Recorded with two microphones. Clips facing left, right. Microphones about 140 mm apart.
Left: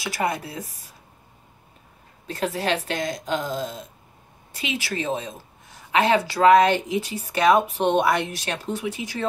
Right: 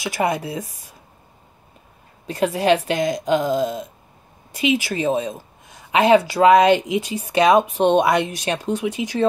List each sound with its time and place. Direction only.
0.0 s a woman's voice: 15° right (ahead or behind)
2.2 s a woman's voice: 15° right (ahead or behind)